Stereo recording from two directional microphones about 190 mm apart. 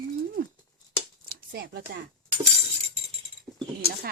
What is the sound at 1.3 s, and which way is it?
Speech, 50° right (ahead or behind).